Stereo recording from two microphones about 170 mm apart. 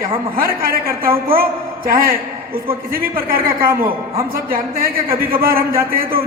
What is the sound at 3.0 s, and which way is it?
Speech, 60° right (ahead or behind).